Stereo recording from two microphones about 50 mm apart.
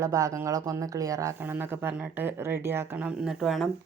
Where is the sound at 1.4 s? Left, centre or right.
Right.